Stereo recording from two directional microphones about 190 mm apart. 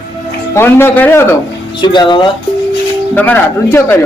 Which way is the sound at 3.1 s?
10° left (ahead or behind).